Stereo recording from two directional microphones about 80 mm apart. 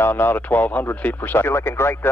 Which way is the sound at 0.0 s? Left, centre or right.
Left.